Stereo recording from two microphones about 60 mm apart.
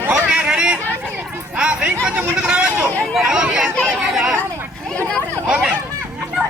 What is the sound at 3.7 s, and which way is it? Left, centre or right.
Speech, centre.